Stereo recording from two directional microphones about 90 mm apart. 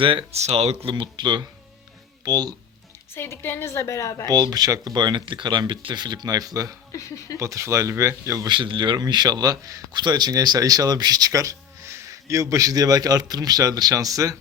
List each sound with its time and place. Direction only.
0.0 s speech: 70° right (ahead or behind)
0.9 s speech: 65° right (ahead or behind); by 2.6 s 45° right (ahead or behind)
3.2 s a woman's voice: 25° left (ahead or behind)
4.3 s speech: 45° right (ahead or behind)
6.9 s speech: 40° left (ahead or behind)
7.3 s speech: 35° right (ahead or behind)
8.4 s speech: 65° right (ahead or behind); by 14.3 s 40° right (ahead or behind)